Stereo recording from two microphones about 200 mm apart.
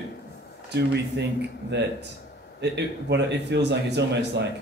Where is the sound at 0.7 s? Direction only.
60° right (ahead or behind).